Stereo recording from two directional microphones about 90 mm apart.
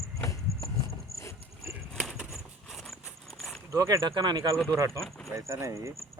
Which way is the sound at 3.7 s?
40° right (ahead or behind).